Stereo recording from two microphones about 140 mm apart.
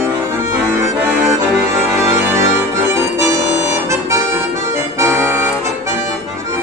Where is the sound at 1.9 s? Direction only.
15° right (ahead or behind).